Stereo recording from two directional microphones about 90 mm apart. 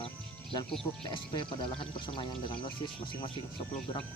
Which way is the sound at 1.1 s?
65° left (ahead or behind).